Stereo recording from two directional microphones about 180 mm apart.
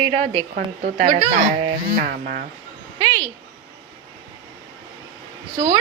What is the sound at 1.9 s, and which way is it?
Speech, 55° right (ahead or behind).